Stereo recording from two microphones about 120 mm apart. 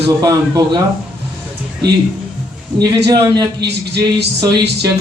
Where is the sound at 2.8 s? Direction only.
35° right (ahead or behind).